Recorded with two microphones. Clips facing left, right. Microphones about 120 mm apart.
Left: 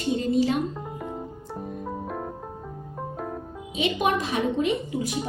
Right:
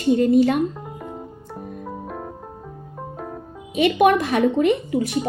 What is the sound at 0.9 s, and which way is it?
Music, centre (ahead or behind).